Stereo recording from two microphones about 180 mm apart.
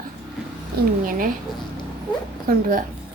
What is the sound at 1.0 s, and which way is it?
Speech, 50° right (ahead or behind).